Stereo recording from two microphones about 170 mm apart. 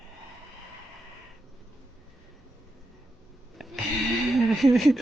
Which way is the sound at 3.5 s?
Centre (ahead or behind).